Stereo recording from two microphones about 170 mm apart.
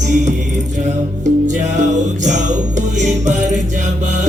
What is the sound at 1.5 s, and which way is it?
Music, 45° right (ahead or behind).